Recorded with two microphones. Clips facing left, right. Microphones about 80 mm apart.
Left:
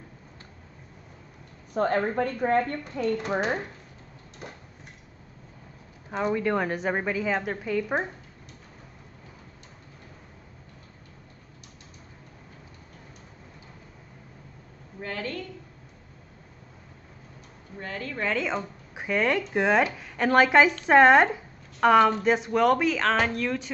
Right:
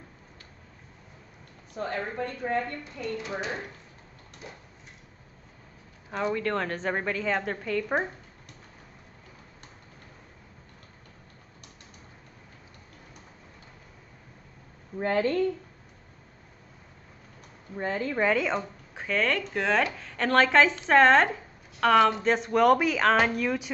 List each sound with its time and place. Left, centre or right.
1.7 s a woman's voice: left
6.1 s speech: centre
15.0 s a woman's voice: right
17.7 s a woman's voice: right
18.3 s speech: centre
18.9 s speech: centre